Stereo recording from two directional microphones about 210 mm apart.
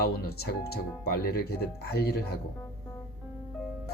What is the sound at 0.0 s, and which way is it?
Speech, 50° left (ahead or behind).